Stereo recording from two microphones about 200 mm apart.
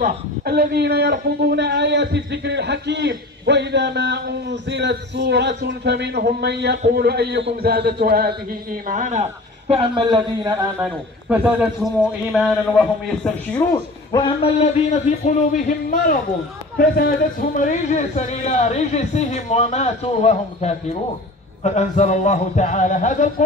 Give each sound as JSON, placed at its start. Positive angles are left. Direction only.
{"t": 0.0, "sound": "a man's voice", "side_deg": -50}
{"t": 8.8, "sound": "a man's voice", "side_deg": -40}
{"t": 10.8, "sound": "a man's voice", "side_deg": -5}
{"t": 13.7, "sound": "speech", "side_deg": 20}